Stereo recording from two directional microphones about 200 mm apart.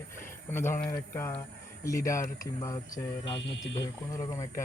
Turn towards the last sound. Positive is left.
turn(degrees=65)  # may be behind; listen again after turning